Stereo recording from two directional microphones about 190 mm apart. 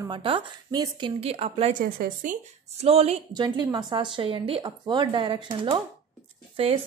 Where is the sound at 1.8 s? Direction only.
45° right (ahead or behind).